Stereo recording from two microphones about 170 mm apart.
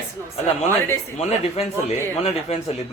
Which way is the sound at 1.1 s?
40° left (ahead or behind).